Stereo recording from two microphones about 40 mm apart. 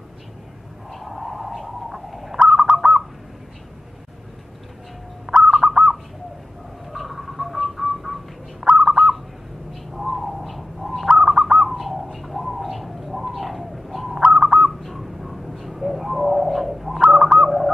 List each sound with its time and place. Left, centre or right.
0.9 s a sound: centre
2.3 s bird: centre
5.2 s bird: centre
8.8 s owl: centre
9.9 s bird: centre
11.1 s bird: centre
11.7 s bird: centre
14.8 s bird: centre
17.0 s bird: centre